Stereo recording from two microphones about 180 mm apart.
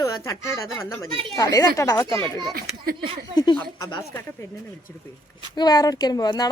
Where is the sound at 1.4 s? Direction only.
20° left (ahead or behind).